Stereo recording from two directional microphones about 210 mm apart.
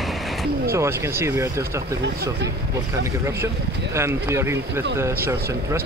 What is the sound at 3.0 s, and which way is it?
Speech, 10° right (ahead or behind).